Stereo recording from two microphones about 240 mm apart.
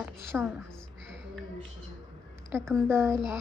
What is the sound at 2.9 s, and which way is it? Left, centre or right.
Speech, centre.